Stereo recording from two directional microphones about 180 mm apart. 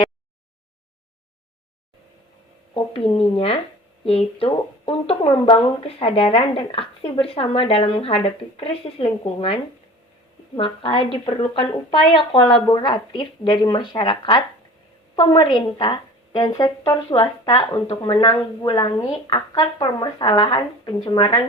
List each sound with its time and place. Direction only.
2.7 s a woman's voice: 30° left (ahead or behind)
17.5 s speech: 30° left (ahead or behind)